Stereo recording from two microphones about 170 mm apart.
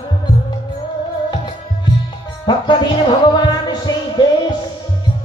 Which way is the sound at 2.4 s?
25° left (ahead or behind).